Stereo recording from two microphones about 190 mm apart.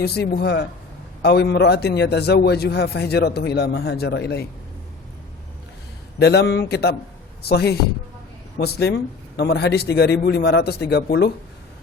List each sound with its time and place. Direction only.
0.0 s a man's voice: 60° left (ahead or behind)
6.1 s a man's voice: 60° left (ahead or behind)